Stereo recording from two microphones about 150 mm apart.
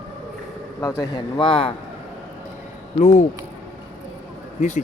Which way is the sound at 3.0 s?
50° left (ahead or behind).